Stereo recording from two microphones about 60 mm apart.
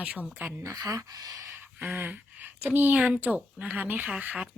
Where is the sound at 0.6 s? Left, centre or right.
Right.